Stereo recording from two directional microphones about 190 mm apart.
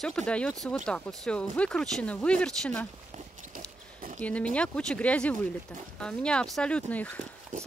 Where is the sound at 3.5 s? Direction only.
45° right (ahead or behind).